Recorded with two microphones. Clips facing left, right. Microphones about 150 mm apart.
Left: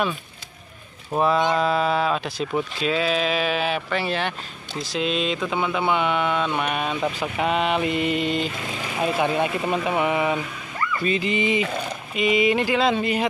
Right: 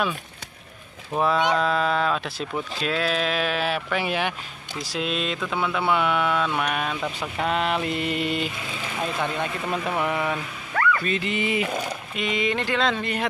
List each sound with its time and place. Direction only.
1.2 s speech: 5° left (ahead or behind)
9.0 s speech: 10° left (ahead or behind)
10.7 s dog: 85° right
11.1 s speech: centre (ahead or behind)